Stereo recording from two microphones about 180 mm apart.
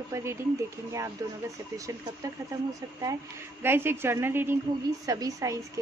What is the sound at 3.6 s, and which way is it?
Speech, 10° right (ahead or behind).